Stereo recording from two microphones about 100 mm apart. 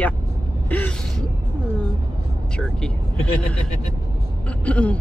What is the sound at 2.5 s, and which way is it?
A woman's voice, 10° left (ahead or behind).